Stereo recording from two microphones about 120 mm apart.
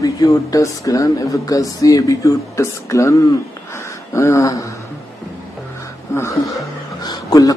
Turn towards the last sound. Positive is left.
turn(degrees=30)  # may be behind; listen again after turning